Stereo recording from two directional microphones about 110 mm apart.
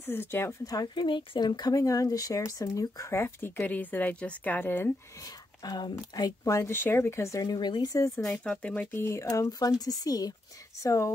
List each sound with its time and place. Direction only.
0.0 s speech: 20° left (ahead or behind)
0.7 s speech: 40° left (ahead or behind); by 4.9 s 20° left (ahead or behind)
5.2 s speech: 35° left (ahead or behind)
8.2 s speech: 5° left (ahead or behind)
8.9 s speech: 25° left (ahead or behind)